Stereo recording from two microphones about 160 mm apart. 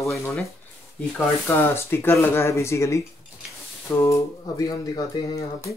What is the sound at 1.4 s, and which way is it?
Speech, 15° left (ahead or behind).